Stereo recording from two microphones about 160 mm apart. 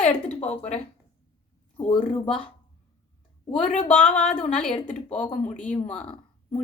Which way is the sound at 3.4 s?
35° left (ahead or behind).